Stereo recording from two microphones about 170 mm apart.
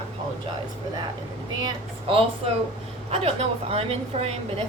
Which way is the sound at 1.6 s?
35° right (ahead or behind).